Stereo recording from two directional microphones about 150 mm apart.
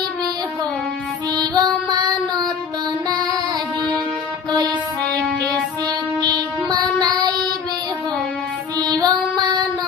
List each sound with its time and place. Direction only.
1.4 s music: 25° right (ahead or behind)
6.2 s child singing: 25° right (ahead or behind)
8.8 s music: 25° right (ahead or behind)